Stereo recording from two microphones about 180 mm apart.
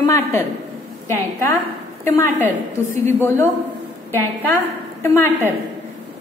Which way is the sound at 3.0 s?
15° left (ahead or behind).